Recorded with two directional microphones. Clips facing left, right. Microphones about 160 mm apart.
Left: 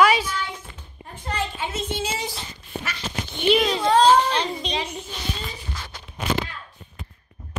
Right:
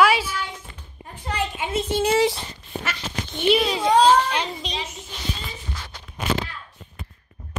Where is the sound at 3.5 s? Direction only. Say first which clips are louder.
Even; 5° right (ahead or behind).